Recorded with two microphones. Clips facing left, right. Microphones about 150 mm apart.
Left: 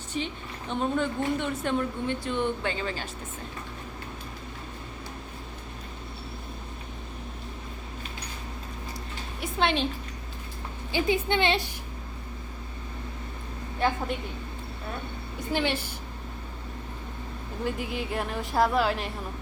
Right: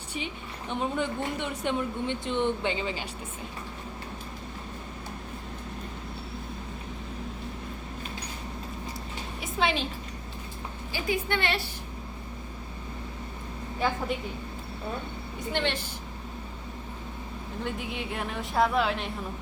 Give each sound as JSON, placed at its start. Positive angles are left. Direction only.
{"t": 0.1, "sound": "a woman's voice", "side_deg": -10}
{"t": 9.4, "sound": "a sound", "side_deg": 0}
{"t": 10.9, "sound": "a woman's voice", "side_deg": 20}
{"t": 15.5, "sound": "a woman's voice", "side_deg": 10}
{"t": 17.6, "sound": "speech", "side_deg": 0}